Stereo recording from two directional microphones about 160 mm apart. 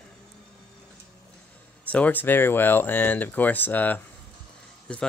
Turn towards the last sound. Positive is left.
turn(degrees=5)  # may be behind; listen again after turning